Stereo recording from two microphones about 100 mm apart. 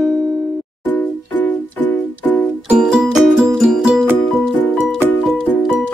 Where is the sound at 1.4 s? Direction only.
20° left (ahead or behind).